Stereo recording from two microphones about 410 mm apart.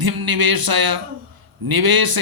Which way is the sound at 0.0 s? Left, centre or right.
Right.